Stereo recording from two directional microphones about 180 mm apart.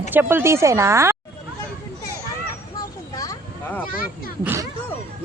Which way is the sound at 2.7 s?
20° left (ahead or behind).